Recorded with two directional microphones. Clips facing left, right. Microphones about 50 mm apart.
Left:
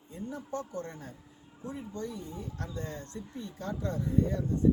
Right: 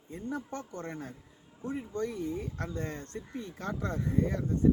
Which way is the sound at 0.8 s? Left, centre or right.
Right.